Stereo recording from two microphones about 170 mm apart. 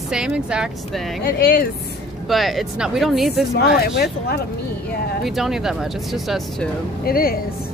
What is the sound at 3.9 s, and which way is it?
Speech, 65° left (ahead or behind).